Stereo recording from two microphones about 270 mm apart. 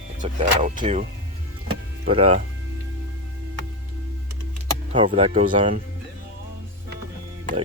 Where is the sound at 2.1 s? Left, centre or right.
Right.